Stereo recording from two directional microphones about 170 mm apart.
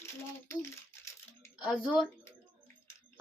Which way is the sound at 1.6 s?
Centre (ahead or behind).